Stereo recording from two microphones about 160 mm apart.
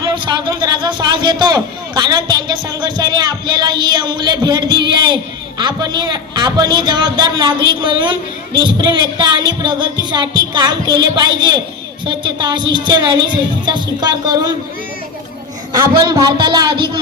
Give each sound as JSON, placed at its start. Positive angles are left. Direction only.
{"t": 0.0, "sound": "a man's voice", "side_deg": -25}
{"t": 15.7, "sound": "a man's voice", "side_deg": -25}